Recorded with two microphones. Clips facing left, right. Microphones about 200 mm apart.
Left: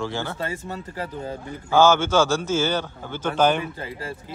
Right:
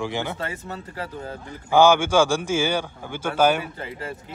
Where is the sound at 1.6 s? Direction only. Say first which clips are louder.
Right 1 dB; 15° right (ahead or behind).